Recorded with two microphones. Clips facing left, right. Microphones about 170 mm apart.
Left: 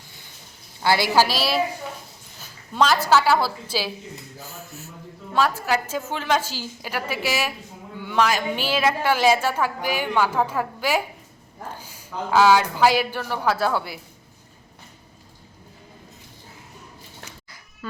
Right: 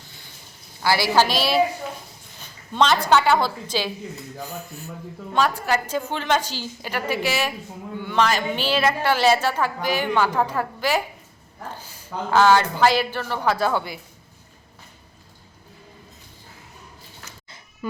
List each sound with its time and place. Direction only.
0.8 s a woman's voice: 20° left (ahead or behind)
1.1 s a woman's voice: 5° left (ahead or behind)